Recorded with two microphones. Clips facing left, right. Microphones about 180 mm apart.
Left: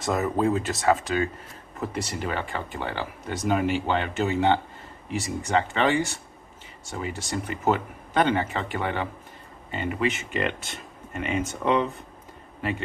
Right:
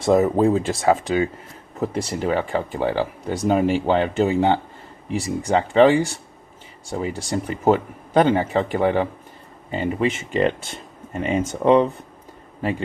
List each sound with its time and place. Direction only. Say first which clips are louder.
0.0 s speech: right 7 dB; 25° right (ahead or behind)